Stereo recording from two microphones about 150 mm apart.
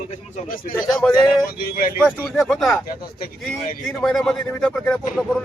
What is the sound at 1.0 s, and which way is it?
Speech, 10° left (ahead or behind).